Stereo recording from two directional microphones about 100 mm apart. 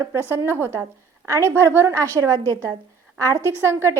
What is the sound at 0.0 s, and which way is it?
A woman's voice, 25° right (ahead or behind).